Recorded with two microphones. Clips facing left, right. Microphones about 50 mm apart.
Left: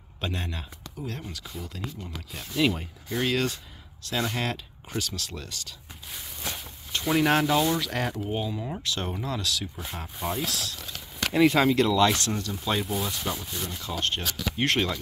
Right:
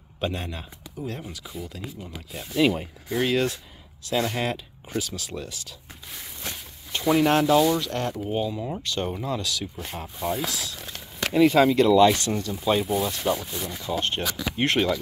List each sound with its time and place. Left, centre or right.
0.2 s speech: centre
6.9 s a sound: centre
7.2 s speech: centre
8.2 s speech: centre
9.2 s speech: centre
10.8 s a sound: right
11.3 s speech: centre
13.8 s speech: centre